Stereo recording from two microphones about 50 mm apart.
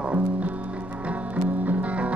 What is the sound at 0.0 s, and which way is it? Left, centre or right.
Music, right.